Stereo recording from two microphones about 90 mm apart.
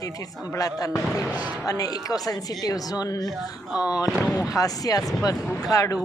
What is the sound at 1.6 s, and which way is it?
Speech, 40° left (ahead or behind).